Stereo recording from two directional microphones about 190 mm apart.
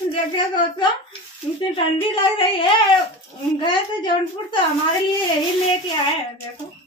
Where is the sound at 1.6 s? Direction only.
25° left (ahead or behind).